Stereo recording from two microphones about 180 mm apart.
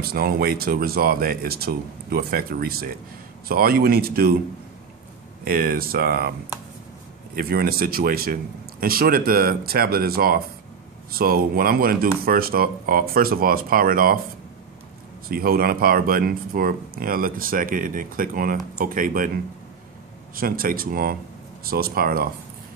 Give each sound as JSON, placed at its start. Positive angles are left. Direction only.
{"t": 0.0, "sound": "speech", "side_deg": -60}
{"t": 5.4, "sound": "speech", "side_deg": -55}
{"t": 7.3, "sound": "speech", "side_deg": -55}
{"t": 15.2, "sound": "speech", "side_deg": -55}
{"t": 20.3, "sound": "speech", "side_deg": -50}